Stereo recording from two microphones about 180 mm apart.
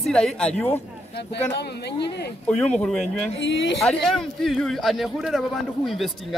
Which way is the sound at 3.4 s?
90° left.